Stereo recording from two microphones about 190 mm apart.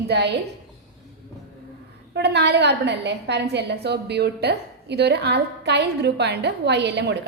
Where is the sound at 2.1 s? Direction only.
65° right (ahead or behind).